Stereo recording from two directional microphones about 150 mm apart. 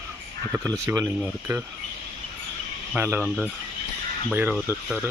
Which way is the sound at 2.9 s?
10° right (ahead or behind).